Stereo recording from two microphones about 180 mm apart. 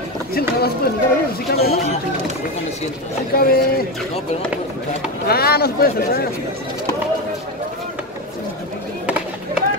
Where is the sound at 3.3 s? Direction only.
55° left (ahead or behind).